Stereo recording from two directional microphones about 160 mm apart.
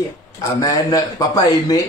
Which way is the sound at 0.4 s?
20° left (ahead or behind).